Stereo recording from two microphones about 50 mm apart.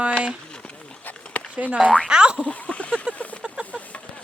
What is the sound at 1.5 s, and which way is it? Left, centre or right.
Boing, right.